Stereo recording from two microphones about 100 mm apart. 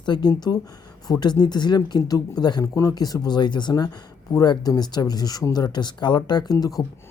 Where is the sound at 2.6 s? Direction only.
30° left (ahead or behind).